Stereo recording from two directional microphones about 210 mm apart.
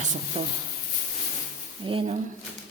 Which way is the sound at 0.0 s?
35° right (ahead or behind).